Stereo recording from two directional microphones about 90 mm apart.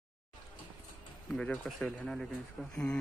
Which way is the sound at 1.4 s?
15° left (ahead or behind).